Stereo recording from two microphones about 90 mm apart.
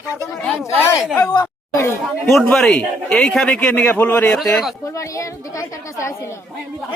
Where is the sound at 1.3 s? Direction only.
50° left (ahead or behind).